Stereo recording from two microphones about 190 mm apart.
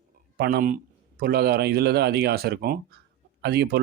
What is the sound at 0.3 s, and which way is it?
Speech, 55° right (ahead or behind).